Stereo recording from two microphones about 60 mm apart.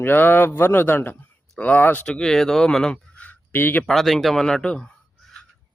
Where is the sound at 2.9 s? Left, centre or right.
Left.